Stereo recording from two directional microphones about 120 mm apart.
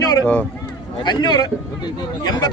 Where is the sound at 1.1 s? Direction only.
35° left (ahead or behind).